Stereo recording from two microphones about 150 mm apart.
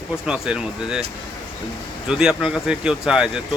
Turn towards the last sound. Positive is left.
turn(degrees=-5)  # may be behind; listen again after turning